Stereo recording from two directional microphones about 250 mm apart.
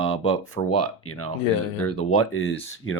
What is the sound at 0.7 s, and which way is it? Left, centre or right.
Speech, left.